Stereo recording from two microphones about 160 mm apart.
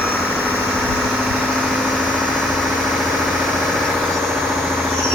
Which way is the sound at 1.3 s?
Centre (ahead or behind).